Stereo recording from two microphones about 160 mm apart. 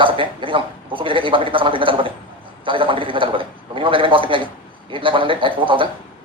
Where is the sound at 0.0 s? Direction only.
30° right (ahead or behind).